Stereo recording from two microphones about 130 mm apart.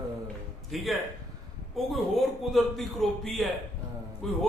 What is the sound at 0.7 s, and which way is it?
Speech, centre (ahead or behind).